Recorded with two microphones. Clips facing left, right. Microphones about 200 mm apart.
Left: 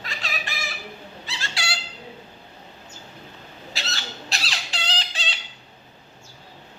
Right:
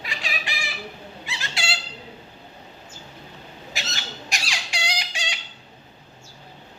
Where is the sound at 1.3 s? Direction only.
20° right (ahead or behind).